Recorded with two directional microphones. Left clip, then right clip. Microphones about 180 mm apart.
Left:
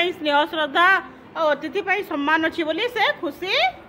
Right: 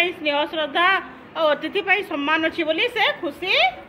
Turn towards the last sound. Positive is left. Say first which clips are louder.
# right 2 dB
turn(degrees=10)  # may be behind; listen again after turning